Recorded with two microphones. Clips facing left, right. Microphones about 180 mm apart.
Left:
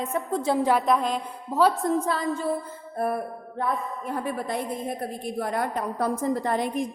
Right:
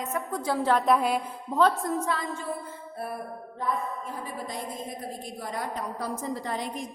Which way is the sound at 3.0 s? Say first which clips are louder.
Left 9 dB; 45° left (ahead or behind).